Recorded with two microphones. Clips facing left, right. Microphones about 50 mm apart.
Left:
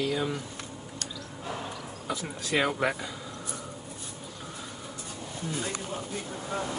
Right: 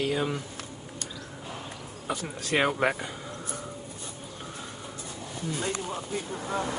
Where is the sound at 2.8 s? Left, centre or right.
Right.